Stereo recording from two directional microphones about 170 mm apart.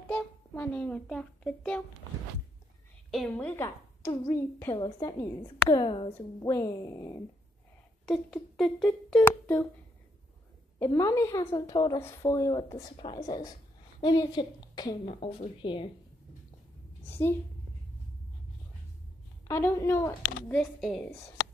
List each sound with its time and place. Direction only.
0.1 s a child's voice: 10° left (ahead or behind)
3.1 s a woman's voice: 5° left (ahead or behind)
5.8 s speech: 30° left (ahead or behind)
8.0 s a woman's voice: 5° left (ahead or behind)
10.8 s a woman's voice: 15° left (ahead or behind)
15.1 s speech: 35° left (ahead or behind)
19.4 s a woman's voice: 15° left (ahead or behind)